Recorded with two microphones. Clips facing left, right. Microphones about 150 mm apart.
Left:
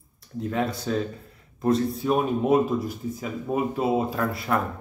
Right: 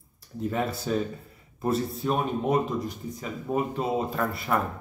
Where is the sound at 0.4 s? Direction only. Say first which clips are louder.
Left 2 dB; 5° right (ahead or behind).